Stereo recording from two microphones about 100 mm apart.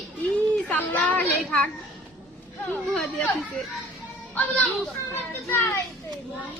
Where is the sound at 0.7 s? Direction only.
15° left (ahead or behind).